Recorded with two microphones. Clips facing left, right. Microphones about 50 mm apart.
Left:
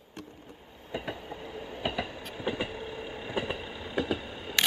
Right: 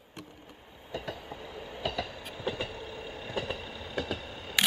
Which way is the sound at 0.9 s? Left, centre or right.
Left.